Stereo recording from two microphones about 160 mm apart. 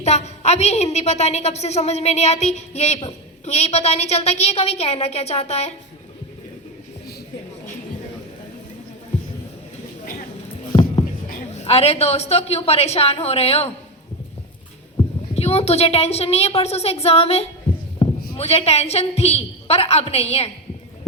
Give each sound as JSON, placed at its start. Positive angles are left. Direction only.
{"t": 0.0, "sound": "a woman's voice", "side_deg": 45}
{"t": 10.7, "sound": "a sound", "side_deg": 30}
{"t": 11.5, "sound": "a woman's voice", "side_deg": 40}
{"t": 15.4, "sound": "a woman's voice", "side_deg": 40}
{"t": 18.0, "sound": "a sound", "side_deg": 35}
{"t": 18.3, "sound": "a woman's voice", "side_deg": 40}